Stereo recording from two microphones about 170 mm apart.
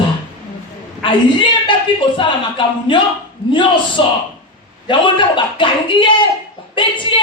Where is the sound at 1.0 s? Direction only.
30° left (ahead or behind).